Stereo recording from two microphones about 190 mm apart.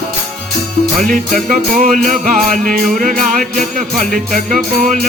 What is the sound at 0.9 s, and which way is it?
Music, 45° right (ahead or behind).